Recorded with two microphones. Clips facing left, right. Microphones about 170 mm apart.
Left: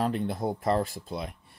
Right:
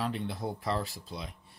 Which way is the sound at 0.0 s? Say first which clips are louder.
Left 6 dB; 45° left (ahead or behind).